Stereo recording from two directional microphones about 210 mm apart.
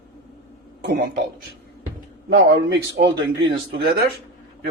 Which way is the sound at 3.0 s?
45° right (ahead or behind).